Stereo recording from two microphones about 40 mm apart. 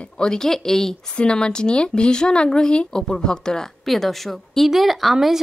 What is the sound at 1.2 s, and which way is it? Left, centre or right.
Speech, left.